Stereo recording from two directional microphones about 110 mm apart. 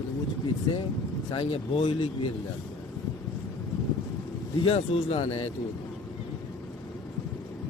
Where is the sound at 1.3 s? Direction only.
50° left (ahead or behind).